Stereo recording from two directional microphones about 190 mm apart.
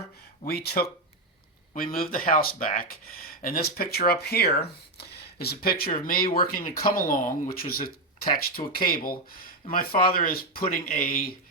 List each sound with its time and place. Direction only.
0.4 s speech: 55° left (ahead or behind)